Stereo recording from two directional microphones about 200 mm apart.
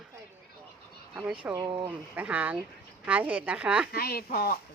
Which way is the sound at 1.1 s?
5° right (ahead or behind).